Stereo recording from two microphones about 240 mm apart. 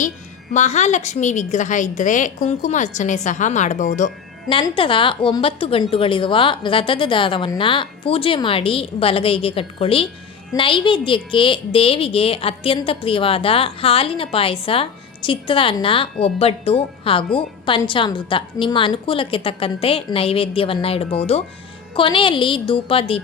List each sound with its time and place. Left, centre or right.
0.5 s a woman's voice: left